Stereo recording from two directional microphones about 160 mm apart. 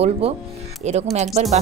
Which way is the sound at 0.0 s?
40° right (ahead or behind).